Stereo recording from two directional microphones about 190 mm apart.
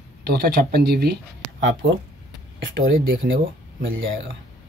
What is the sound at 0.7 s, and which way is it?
Speech, 55° right (ahead or behind).